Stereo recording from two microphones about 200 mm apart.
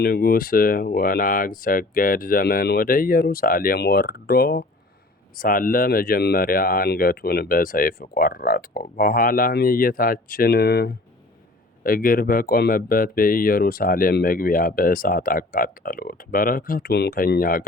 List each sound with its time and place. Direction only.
0.0 s speech: 50° left (ahead or behind)